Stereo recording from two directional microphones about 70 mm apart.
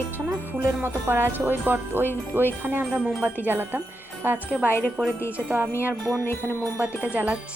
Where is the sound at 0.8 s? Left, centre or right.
Right.